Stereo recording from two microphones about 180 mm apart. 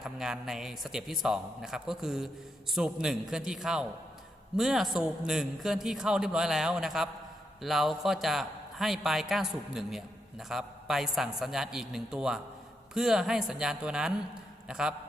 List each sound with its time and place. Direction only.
0.0 s a man's voice: centre (ahead or behind)